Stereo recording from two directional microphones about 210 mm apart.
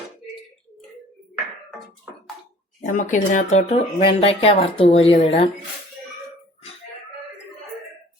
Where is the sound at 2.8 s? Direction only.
35° left (ahead or behind).